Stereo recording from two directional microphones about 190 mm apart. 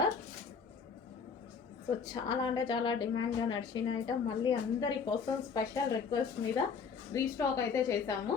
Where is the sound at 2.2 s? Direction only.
25° left (ahead or behind).